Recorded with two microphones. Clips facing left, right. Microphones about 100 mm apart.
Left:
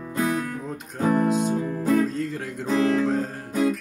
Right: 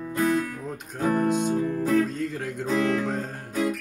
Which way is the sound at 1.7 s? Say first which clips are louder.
Left 2 dB; 20° left (ahead or behind).